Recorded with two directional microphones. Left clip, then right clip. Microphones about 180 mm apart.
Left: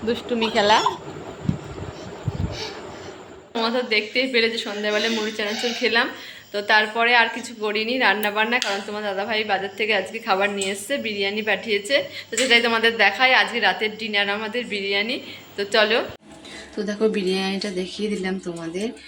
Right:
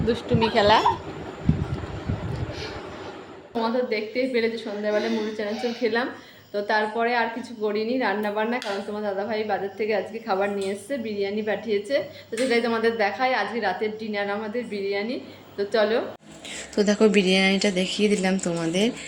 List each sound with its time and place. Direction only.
0.1 s speech: centre (ahead or behind)
3.5 s a woman's voice: 10° right (ahead or behind)
16.7 s speech: 25° right (ahead or behind)